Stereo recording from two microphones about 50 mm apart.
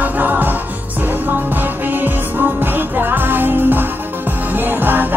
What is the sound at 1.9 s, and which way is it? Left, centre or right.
Music, right.